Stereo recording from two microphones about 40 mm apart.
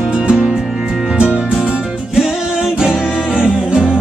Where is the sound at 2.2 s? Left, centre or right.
Centre.